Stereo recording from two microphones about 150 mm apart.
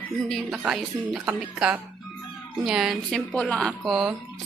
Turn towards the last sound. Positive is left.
turn(degrees=0)  # may be behind; listen again after turning